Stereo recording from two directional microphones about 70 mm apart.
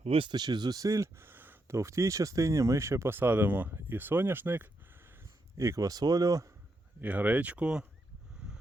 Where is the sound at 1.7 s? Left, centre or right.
Right.